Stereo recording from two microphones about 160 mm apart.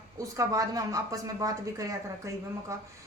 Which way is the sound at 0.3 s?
20° right (ahead or behind).